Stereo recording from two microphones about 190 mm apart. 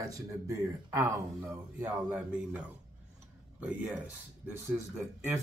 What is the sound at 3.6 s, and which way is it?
Speech, 5° right (ahead or behind).